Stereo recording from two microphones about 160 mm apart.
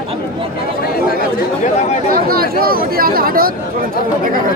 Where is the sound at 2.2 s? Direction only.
70° right (ahead or behind).